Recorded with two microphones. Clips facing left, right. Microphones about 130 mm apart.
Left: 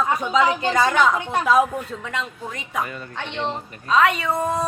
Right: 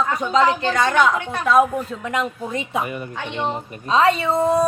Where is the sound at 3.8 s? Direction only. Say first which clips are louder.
Right 2 dB; 30° right (ahead or behind).